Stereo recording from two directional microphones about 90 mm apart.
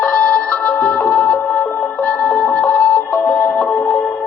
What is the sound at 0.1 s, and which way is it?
Music, 15° left (ahead or behind).